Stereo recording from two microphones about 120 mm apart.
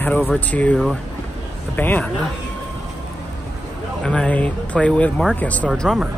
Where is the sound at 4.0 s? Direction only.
5° left (ahead or behind).